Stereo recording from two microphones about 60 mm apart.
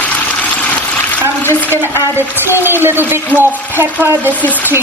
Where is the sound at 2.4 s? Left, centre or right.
Right.